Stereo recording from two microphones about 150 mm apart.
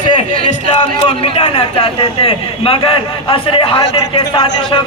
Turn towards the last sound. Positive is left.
turn(degrees=30)  # may be behind; listen again after turning